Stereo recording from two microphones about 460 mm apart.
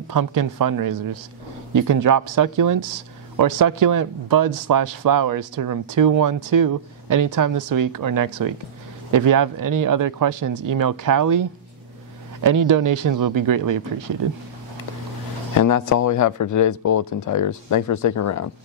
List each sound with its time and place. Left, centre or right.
0.1 s speech: right
12.4 s speech: right
15.5 s speech: left